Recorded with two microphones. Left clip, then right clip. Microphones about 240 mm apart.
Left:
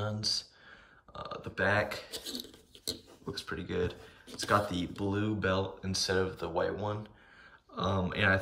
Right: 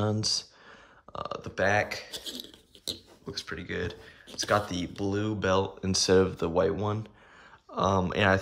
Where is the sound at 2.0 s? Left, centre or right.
Centre.